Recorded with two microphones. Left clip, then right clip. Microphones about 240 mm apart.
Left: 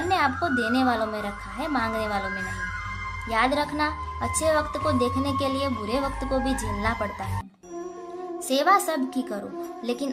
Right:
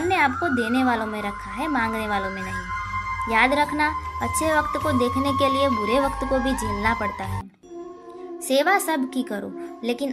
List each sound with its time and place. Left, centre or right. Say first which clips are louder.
0.1 s a woman's voice: right 2 dB; centre
6.3 s speech: right 1 dB; right
6.8 s a woman's voice: right 4 dB; centre
8.4 s a woman's voice: right 1 dB; centre